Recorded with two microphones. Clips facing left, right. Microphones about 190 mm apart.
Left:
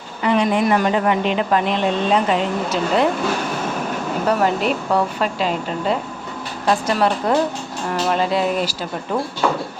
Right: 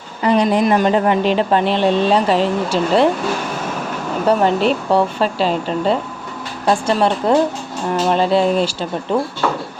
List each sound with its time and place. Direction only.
0.2 s speech: 35° right (ahead or behind)
0.6 s speech: 25° right (ahead or behind)
4.3 s speech: 30° right (ahead or behind)
6.8 s a sound: 30° right (ahead or behind)